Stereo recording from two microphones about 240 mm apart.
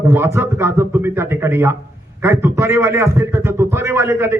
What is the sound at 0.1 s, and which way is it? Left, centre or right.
A man's voice, centre.